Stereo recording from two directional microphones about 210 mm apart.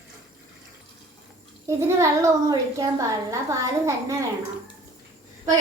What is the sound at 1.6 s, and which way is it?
A woman's voice, 15° right (ahead or behind).